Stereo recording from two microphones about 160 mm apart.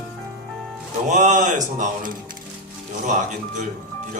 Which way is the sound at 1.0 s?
50° right (ahead or behind).